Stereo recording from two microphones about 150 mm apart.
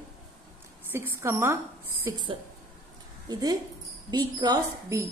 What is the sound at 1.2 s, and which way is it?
Speech, 15° right (ahead or behind).